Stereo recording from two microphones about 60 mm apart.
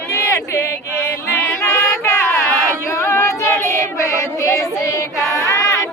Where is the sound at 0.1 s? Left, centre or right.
Left.